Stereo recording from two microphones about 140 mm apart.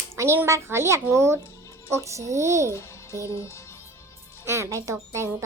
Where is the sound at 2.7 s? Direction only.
20° left (ahead or behind).